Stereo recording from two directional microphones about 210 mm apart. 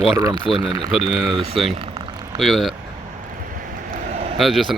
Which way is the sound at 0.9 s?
Centre (ahead or behind).